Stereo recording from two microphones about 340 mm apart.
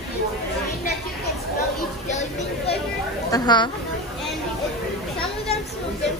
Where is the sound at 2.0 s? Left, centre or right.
Centre.